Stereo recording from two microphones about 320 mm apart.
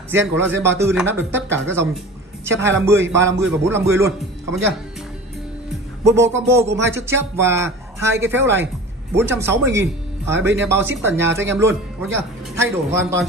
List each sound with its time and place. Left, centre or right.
0.1 s speech: centre
6.0 s speech: centre